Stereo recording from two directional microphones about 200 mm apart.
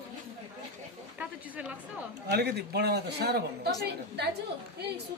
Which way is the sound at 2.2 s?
55° right (ahead or behind).